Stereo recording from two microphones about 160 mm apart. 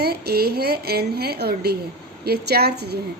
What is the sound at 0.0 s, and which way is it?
A woman's voice, 80° right.